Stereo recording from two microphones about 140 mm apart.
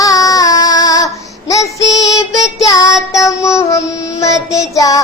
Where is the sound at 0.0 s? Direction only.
25° left (ahead or behind).